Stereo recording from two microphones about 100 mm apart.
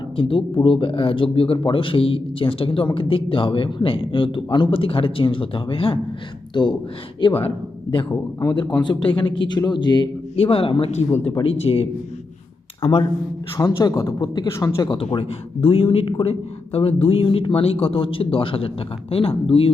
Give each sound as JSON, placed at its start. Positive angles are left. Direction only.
{"t": 0.2, "sound": "speech", "side_deg": 60}
{"t": 6.5, "sound": "speech", "side_deg": 50}
{"t": 8.1, "sound": "speech", "side_deg": 25}
{"t": 8.8, "sound": "speech", "side_deg": 50}
{"t": 10.3, "sound": "a man's voice", "side_deg": 70}
{"t": 13.6, "sound": "speech", "side_deg": 40}
{"t": 14.8, "sound": "a man's voice", "side_deg": 60}